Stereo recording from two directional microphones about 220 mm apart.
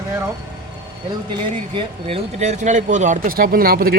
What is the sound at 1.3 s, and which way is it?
Speech, 20° right (ahead or behind).